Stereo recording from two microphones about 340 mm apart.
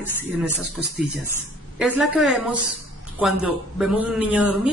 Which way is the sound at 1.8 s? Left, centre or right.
Centre.